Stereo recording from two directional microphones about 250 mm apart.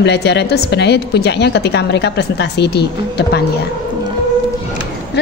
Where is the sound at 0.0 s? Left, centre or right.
Left.